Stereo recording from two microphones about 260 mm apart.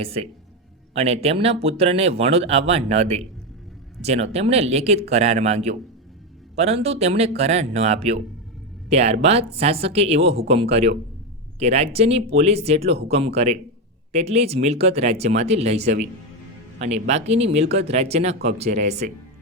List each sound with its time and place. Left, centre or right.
0.0 s speech: right